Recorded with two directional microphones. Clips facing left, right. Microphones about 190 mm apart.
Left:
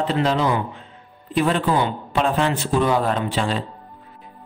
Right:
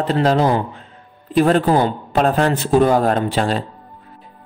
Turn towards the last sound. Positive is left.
turn(degrees=-45)  # may be behind; listen again after turning